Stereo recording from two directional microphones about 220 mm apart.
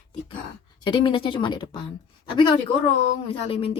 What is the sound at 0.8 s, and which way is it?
A woman's voice, 20° left (ahead or behind).